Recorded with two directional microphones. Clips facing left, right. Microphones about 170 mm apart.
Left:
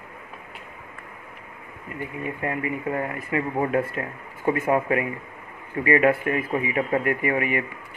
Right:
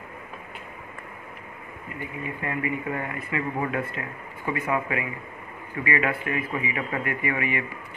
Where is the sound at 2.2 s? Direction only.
40° left (ahead or behind).